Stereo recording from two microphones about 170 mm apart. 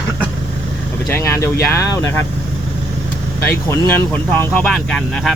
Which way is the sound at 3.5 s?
10° left (ahead or behind).